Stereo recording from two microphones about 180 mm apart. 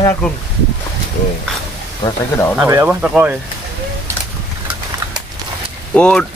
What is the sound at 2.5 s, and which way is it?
Speech, 10° right (ahead or behind).